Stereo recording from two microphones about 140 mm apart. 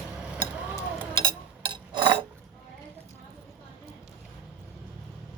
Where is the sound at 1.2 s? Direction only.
35° right (ahead or behind).